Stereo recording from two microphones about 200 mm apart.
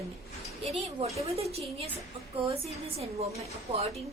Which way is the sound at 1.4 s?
30° right (ahead or behind).